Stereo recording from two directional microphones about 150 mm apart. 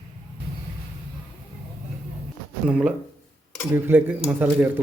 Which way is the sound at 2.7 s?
5° right (ahead or behind).